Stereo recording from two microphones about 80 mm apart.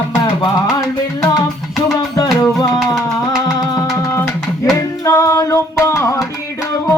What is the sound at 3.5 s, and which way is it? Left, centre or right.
Music, left.